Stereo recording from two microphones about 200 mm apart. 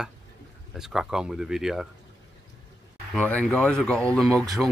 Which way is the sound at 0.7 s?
Centre (ahead or behind).